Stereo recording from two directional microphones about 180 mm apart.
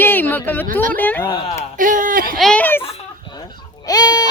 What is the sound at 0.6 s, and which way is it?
Speech, 50° right (ahead or behind).